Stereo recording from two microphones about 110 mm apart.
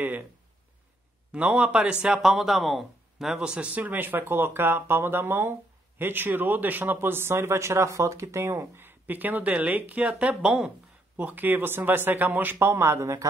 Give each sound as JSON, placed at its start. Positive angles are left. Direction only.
{"t": 1.3, "sound": "speech", "side_deg": -10}